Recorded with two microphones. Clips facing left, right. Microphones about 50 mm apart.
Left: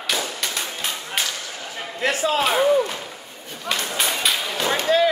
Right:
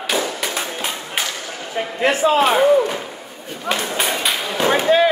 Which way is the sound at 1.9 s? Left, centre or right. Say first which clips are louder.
Right 5 dB; right.